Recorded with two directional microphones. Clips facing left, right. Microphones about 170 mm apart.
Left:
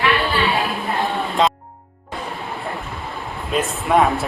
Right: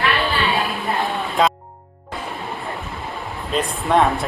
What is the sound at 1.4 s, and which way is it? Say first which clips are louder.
Music: even; centre (ahead or behind).